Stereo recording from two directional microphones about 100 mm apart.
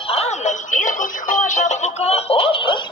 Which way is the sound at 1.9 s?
90° left.